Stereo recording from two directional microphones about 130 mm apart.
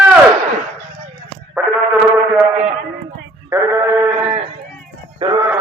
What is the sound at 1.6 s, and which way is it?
Insect, 10° right (ahead or behind).